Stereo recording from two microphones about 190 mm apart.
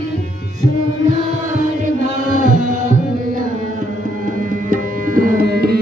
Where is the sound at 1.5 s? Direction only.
40° right (ahead or behind).